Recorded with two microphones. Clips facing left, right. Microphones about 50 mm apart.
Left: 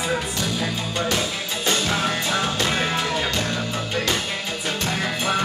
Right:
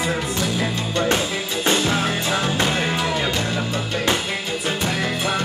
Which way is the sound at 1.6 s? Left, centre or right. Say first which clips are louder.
Right 3 dB; right.